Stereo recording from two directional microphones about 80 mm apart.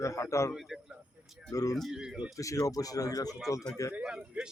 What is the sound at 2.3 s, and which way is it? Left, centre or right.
Speech, left.